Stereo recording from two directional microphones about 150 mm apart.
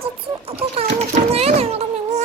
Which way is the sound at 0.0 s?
40° right (ahead or behind).